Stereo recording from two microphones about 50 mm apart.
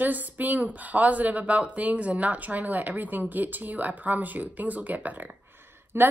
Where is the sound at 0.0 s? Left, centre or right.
Right.